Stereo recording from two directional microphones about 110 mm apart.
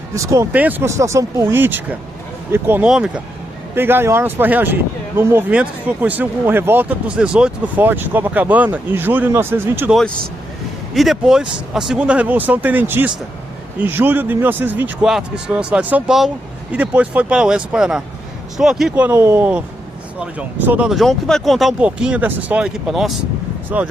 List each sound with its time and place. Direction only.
0.1 s speech: 30° right (ahead or behind)
0.5 s speech: 15° right (ahead or behind)
2.8 s speech: 5° right (ahead or behind)
3.8 s speech: 20° right (ahead or behind)
10.9 s speech: centre (ahead or behind)
15.0 s speech: 5° right (ahead or behind)
19.0 s speech: 25° right (ahead or behind)
20.9 s speech: 5° left (ahead or behind)
22.9 s speech: centre (ahead or behind)
23.7 s speech: 10° right (ahead or behind)